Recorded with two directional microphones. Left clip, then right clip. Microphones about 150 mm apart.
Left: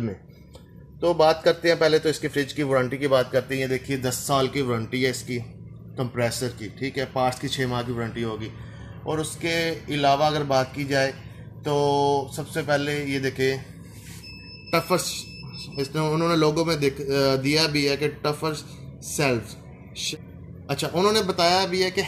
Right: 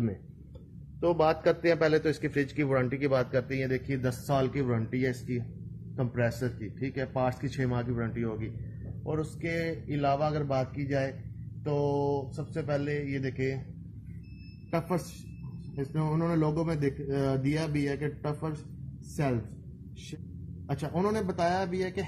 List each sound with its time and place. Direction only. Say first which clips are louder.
1.0 s a man's voice: left 6 dB; 30° left (ahead or behind)
9.0 s speech: left 7 dB; 35° left (ahead or behind)
11.6 s mantra: left 8 dB; 45° left (ahead or behind)
12.8 s speech: left 7 dB; 35° left (ahead or behind)
14.7 s a man's voice: left 9 dB; 20° left (ahead or behind)
20.6 s a man's voice: left 9 dB; 25° left (ahead or behind)